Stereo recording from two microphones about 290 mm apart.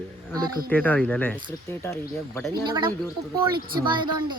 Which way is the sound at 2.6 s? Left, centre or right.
Centre.